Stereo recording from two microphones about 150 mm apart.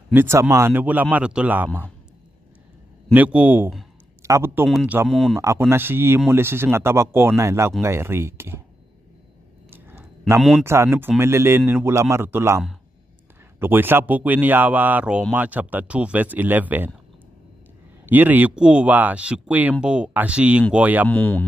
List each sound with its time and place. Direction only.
0.1 s speech: 15° right (ahead or behind)
3.1 s speech: 10° right (ahead or behind)
5.1 s speech: centre (ahead or behind)
5.4 s speech: 20° right (ahead or behind)
9.7 s a sound: 15° right (ahead or behind)
10.6 s speech: 15° right (ahead or behind)
18.0 s speech: 10° right (ahead or behind)
21.1 s speech: 10° left (ahead or behind)